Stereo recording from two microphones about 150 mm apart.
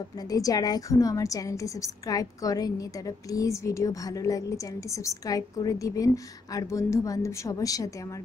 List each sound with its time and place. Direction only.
0.3 s a woman's voice: 25° left (ahead or behind)